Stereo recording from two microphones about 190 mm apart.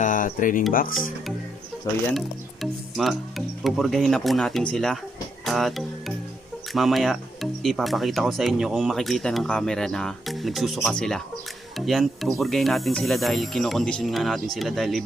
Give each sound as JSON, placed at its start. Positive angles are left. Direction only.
{"t": 0.0, "sound": "speech", "side_deg": 45}
{"t": 2.1, "sound": "speech", "side_deg": 0}